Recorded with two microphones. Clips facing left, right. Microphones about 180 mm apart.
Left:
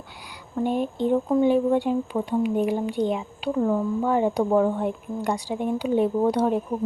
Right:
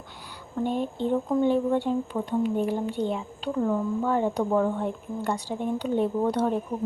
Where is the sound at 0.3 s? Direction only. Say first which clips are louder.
Left 3 dB; 10° left (ahead or behind).